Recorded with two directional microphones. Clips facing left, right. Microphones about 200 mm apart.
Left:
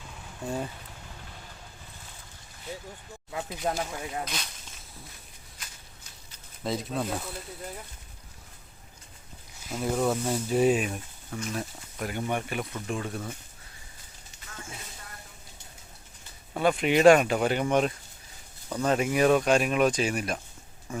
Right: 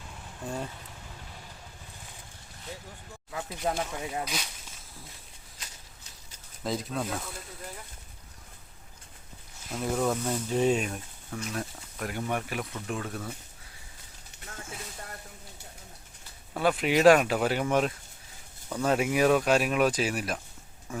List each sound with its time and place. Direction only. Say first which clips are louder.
0.4 s speech: left 3 dB; 5° left (ahead or behind)
3.6 s speech: right 1 dB; centre (ahead or behind)
6.6 s speech: left 1 dB; centre (ahead or behind)
9.6 s speech: left 1 dB; centre (ahead or behind)
16.6 s speech: left 2 dB; centre (ahead or behind)